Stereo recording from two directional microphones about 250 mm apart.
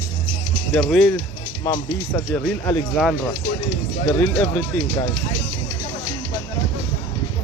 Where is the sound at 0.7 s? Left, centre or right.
Centre.